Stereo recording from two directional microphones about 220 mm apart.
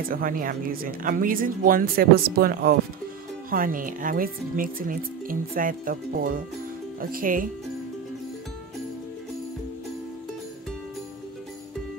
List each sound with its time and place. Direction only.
0.1 s speech: 40° right (ahead or behind)